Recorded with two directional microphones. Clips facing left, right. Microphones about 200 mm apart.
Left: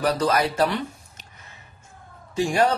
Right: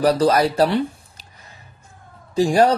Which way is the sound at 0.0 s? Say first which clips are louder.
Right 6 dB; 35° right (ahead or behind).